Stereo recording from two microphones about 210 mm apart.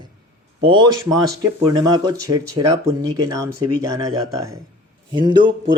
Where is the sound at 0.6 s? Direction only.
20° right (ahead or behind).